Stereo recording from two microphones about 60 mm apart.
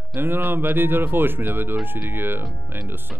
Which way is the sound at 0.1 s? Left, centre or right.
Right.